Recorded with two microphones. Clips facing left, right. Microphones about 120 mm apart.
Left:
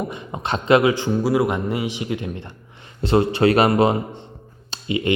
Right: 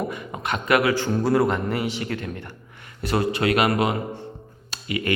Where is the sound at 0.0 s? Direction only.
25° left (ahead or behind).